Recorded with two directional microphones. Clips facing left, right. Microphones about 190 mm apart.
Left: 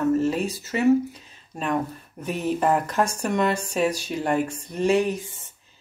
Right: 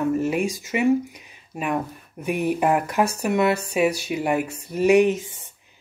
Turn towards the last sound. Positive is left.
turn(degrees=-15)  # may be behind; listen again after turning